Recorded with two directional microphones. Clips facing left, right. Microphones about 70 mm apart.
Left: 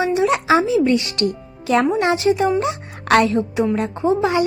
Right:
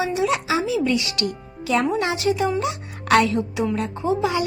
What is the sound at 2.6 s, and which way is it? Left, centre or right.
A woman's voice, left.